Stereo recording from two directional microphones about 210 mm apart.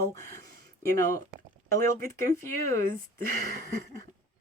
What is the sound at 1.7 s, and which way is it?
Speech, 15° left (ahead or behind).